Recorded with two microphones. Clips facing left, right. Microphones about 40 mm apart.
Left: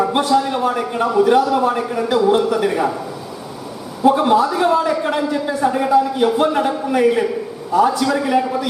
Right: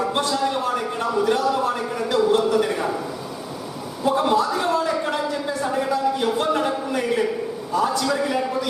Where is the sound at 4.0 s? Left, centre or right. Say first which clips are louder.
Left 6 dB; centre.